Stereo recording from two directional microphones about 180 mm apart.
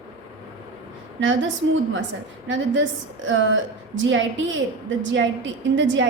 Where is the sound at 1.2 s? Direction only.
90° right.